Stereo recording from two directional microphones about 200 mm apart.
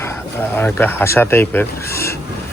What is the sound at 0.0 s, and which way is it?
Speech, 10° left (ahead or behind).